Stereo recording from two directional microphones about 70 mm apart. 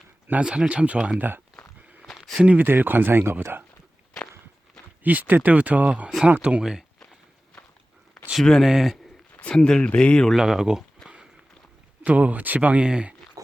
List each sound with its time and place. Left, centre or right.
0.3 s speech: centre
2.0 s a sound: centre
2.4 s speech: right
5.0 s speech: right; by 6.8 s centre
8.4 s speech: centre
8.6 s speech: centre
9.3 s speech: centre
10.3 s speech: centre
12.0 s speech: right